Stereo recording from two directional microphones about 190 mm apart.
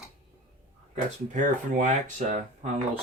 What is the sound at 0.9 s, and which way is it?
Speech, 40° right (ahead or behind).